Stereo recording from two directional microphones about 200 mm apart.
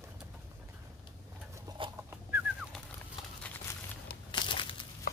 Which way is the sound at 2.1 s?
10° right (ahead or behind).